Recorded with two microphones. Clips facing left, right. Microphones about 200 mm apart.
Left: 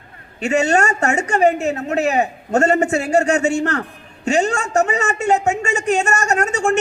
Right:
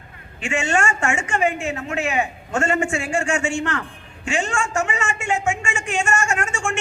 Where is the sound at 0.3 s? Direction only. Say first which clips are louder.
Left 6 dB; 40° left (ahead or behind).